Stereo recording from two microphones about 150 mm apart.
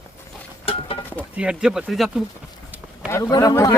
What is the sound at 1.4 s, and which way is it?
Speech, 5° right (ahead or behind).